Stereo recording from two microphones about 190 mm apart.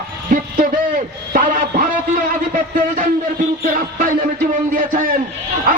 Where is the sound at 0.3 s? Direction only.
45° right (ahead or behind).